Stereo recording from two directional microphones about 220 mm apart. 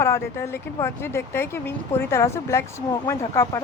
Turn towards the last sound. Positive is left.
turn(degrees=15)  # may be behind; listen again after turning